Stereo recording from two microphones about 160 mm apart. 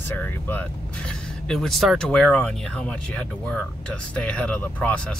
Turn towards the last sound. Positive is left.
turn(degrees=10)  # may be behind; listen again after turning